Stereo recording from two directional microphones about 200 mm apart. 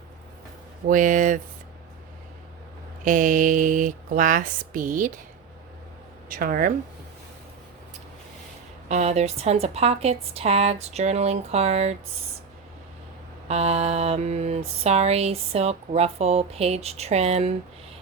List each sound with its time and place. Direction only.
0.9 s mantra: 40° right (ahead or behind)
3.0 s mantra: 40° right (ahead or behind)
6.2 s speech: 45° right (ahead or behind)
8.9 s mantra: 35° right (ahead or behind)
13.5 s mantra: 30° right (ahead or behind)